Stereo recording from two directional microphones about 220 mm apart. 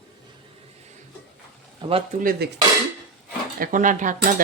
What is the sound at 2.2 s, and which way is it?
Speech, 40° right (ahead or behind).